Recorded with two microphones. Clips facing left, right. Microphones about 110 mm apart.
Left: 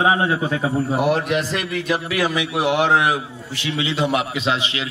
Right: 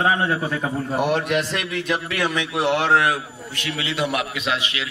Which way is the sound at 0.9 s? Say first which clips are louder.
Right 1 dB; centre (ahead or behind).